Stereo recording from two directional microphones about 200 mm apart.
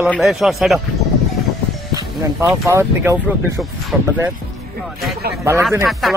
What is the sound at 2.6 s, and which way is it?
Speech, 15° right (ahead or behind).